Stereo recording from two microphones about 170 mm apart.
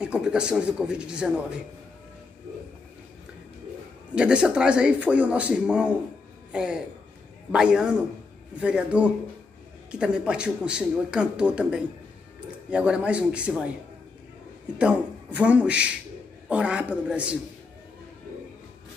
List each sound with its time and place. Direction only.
0.0 s speech: 5° right (ahead or behind)
4.1 s a man's voice: 5° right (ahead or behind)
14.8 s a man's voice: 5° right (ahead or behind)